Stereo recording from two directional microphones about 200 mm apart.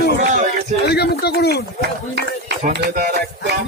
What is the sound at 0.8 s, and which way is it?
Speech, 55° left (ahead or behind).